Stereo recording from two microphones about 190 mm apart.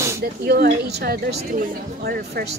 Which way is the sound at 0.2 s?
55° right (ahead or behind).